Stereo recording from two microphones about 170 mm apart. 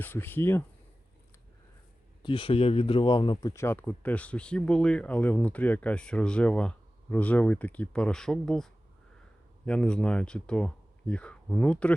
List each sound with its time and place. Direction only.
0.0 s speech: 10° left (ahead or behind)
2.2 s speech: 30° left (ahead or behind)
3.5 s speech: 15° left (ahead or behind)